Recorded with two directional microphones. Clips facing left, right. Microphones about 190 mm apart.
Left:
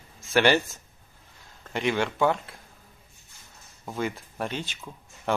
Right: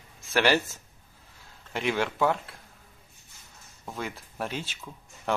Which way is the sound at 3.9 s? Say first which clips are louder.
Left 5 dB; centre (ahead or behind).